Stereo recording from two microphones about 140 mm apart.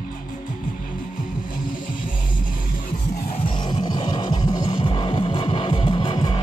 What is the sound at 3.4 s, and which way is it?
Music, 35° left (ahead or behind).